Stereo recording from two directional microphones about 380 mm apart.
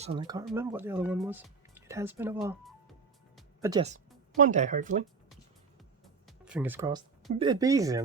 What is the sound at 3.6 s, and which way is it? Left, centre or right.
Speech, centre.